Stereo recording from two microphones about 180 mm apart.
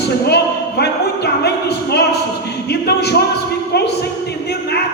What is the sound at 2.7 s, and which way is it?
Music, 65° left (ahead or behind).